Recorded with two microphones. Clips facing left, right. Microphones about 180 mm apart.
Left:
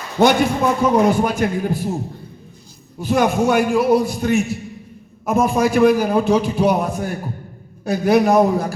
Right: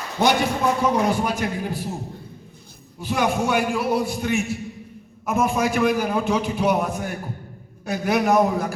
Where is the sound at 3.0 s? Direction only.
45° left (ahead or behind).